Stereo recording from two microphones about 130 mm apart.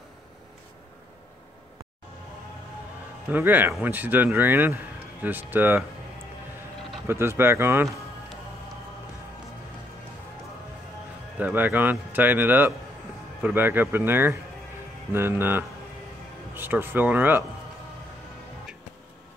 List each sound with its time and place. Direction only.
3.3 s speech: 15° right (ahead or behind)
7.1 s speech: 20° right (ahead or behind)
11.3 s speech: 15° right (ahead or behind)